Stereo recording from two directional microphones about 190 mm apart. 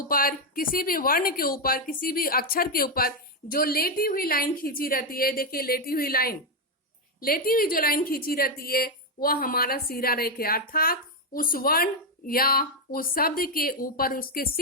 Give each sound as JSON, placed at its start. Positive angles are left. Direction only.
{"t": 0.1, "sound": "a woman's voice", "side_deg": 50}